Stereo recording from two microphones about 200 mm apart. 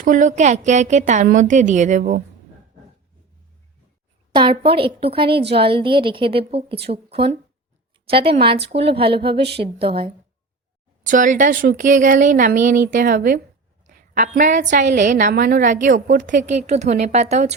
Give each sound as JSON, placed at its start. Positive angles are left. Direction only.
{"t": 0.0, "sound": "a woman's voice", "side_deg": -40}
{"t": 4.4, "sound": "a woman's voice", "side_deg": -25}
{"t": 11.0, "sound": "a woman's voice", "side_deg": -40}